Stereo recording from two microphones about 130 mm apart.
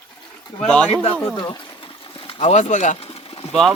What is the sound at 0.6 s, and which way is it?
Speech, 5° left (ahead or behind).